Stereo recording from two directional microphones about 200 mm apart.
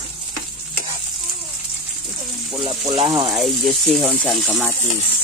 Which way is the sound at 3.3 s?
Centre (ahead or behind).